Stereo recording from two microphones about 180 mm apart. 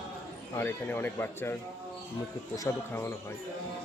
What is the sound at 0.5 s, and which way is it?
Speech, 10° left (ahead or behind).